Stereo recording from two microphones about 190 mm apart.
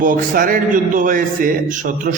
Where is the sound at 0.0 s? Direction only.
45° right (ahead or behind).